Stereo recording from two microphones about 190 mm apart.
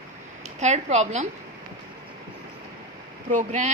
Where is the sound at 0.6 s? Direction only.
35° right (ahead or behind).